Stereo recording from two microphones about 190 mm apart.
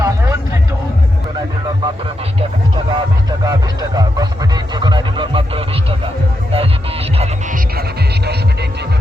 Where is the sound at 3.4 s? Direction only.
20° right (ahead or behind).